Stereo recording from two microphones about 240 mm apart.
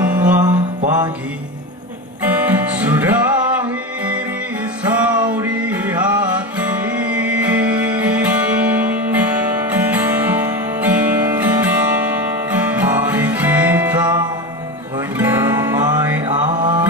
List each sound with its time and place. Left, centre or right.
0.0 s music: centre
2.2 s music: centre
4.8 s music: centre
16.3 s mantra: centre